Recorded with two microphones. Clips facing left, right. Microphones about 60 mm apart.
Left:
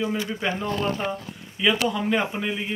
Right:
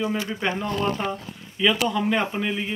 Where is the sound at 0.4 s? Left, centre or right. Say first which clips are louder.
Right 2 dB; centre.